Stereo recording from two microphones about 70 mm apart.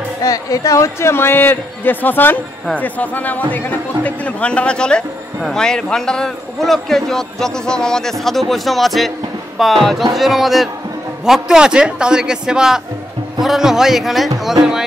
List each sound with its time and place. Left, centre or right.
0.2 s a man's voice: left; by 14.5 s centre